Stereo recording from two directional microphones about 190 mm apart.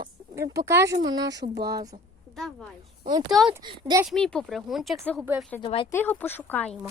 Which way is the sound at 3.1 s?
20° right (ahead or behind).